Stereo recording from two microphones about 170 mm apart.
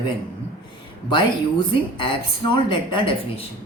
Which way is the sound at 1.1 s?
30° left (ahead or behind).